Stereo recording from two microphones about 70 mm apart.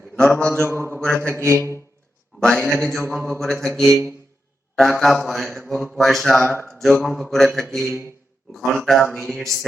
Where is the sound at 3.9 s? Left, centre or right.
Right.